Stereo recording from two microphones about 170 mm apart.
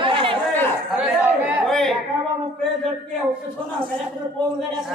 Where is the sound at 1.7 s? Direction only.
Centre (ahead or behind).